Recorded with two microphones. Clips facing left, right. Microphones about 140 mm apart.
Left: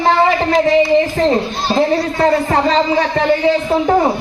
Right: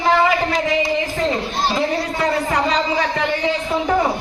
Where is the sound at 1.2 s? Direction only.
35° left (ahead or behind).